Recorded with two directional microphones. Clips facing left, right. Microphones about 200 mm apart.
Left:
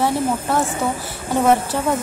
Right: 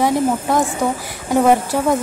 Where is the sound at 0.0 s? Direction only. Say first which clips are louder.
Right 3 dB; 15° right (ahead or behind).